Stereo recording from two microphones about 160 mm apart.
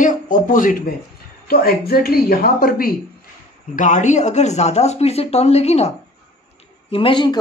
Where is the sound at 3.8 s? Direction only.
50° left (ahead or behind).